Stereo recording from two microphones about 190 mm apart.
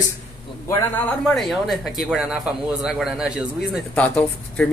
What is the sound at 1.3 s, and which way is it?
A man's voice, centre (ahead or behind).